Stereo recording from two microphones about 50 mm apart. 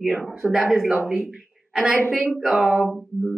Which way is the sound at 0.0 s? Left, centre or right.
Centre.